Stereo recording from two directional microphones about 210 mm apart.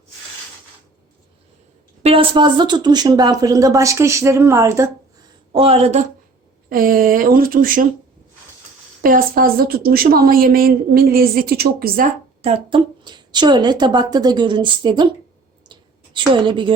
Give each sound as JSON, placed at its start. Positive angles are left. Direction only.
{"t": 2.0, "sound": "speech", "side_deg": -25}
{"t": 5.5, "sound": "a woman's voice", "side_deg": -30}
{"t": 6.7, "sound": "a woman's voice", "side_deg": -45}
{"t": 9.0, "sound": "a woman's voice", "side_deg": -40}
{"t": 12.4, "sound": "speech", "side_deg": -25}
{"t": 15.7, "sound": "a sound", "side_deg": -20}